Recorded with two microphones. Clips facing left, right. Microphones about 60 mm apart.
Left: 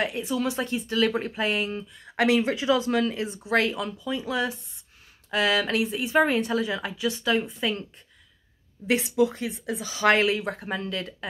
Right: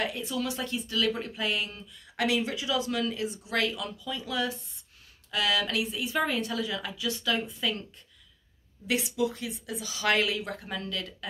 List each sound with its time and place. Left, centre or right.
0.0 s speech: left
8.8 s speech: left